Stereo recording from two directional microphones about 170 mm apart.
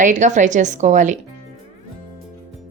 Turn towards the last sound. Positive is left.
turn(degrees=-45)  # may be behind; listen again after turning